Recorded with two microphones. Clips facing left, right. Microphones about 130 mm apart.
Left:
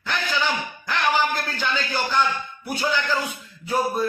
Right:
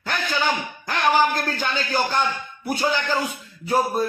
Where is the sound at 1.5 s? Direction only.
45° right (ahead or behind).